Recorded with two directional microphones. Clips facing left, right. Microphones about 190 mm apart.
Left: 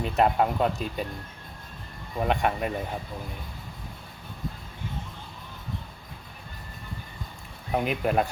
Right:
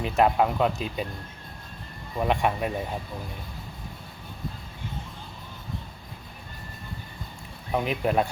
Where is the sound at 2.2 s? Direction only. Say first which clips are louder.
Right 1 dB; centre (ahead or behind).